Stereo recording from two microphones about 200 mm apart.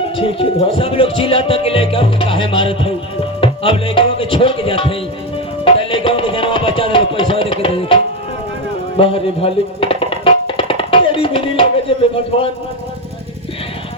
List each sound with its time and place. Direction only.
0.2 s speech: 25° left (ahead or behind)
5.6 s music: 25° left (ahead or behind)